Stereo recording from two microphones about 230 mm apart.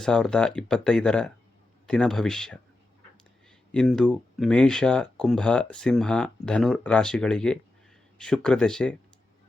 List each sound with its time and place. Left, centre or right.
0.0 s speech: centre
3.7 s speech: centre